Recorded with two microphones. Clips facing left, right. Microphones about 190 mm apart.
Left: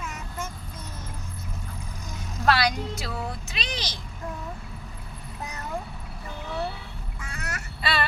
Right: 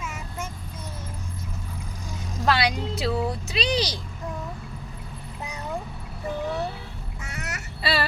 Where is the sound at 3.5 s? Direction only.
35° right (ahead or behind).